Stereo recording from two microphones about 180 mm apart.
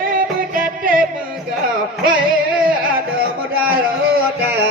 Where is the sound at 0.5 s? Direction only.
50° right (ahead or behind).